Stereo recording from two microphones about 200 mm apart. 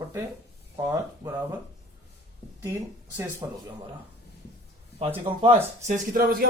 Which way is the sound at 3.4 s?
15° right (ahead or behind).